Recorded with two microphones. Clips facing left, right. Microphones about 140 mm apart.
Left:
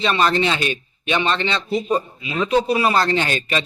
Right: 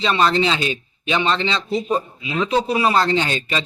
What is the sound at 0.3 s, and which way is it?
A man's voice, 25° right (ahead or behind).